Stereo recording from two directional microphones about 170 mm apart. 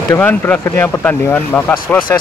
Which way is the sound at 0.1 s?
10° left (ahead or behind).